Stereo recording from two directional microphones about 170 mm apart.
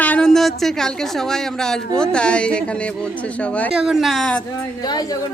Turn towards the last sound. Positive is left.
turn(degrees=25)  # may be behind; listen again after turning